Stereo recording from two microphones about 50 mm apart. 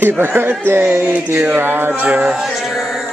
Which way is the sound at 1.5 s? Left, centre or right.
Right.